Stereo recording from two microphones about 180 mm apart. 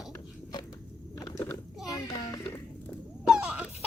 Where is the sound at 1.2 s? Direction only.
20° left (ahead or behind).